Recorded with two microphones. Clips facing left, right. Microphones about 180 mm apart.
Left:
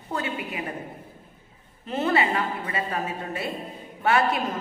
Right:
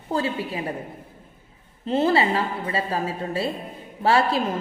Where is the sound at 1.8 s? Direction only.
30° right (ahead or behind).